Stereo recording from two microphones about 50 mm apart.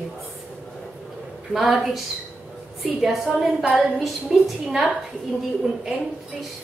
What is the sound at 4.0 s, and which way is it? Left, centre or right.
Speech, centre.